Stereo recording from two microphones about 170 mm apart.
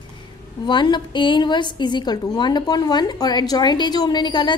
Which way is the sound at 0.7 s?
25° left (ahead or behind).